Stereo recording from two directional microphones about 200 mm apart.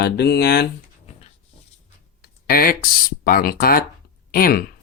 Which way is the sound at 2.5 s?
50° left (ahead or behind).